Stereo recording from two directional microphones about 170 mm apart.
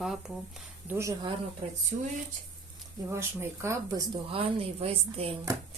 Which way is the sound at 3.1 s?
15° right (ahead or behind).